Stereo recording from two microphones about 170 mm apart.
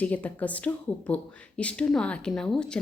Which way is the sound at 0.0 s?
10° left (ahead or behind).